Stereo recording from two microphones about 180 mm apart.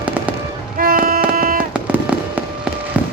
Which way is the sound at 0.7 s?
50° right (ahead or behind).